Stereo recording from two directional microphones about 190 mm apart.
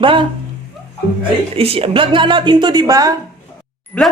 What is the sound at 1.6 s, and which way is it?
A woman's voice, 30° right (ahead or behind).